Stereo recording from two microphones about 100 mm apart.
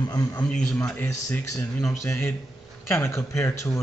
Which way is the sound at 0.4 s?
10° left (ahead or behind).